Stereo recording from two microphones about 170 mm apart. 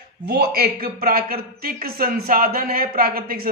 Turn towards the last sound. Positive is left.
turn(degrees=-60)  # may be behind; listen again after turning